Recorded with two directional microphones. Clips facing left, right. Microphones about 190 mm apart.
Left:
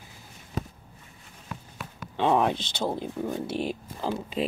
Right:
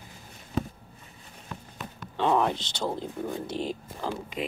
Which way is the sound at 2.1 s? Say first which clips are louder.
Left 1 dB; 15° left (ahead or behind).